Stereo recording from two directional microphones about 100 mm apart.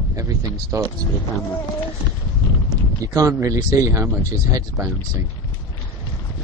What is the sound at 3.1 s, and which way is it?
Speech, 30° right (ahead or behind).